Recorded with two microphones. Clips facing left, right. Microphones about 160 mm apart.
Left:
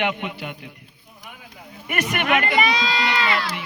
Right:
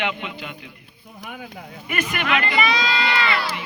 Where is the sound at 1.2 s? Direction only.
70° right (ahead or behind).